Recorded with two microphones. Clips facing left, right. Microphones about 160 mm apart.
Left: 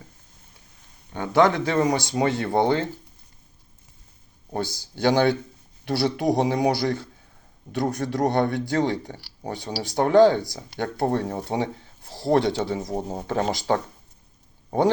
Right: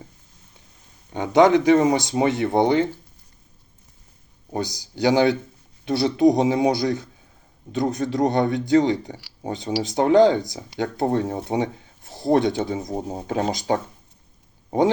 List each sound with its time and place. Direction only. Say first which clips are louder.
1.1 s speech: right 4 dB; 15° right (ahead or behind)
4.5 s speech: right 2 dB; 15° right (ahead or behind)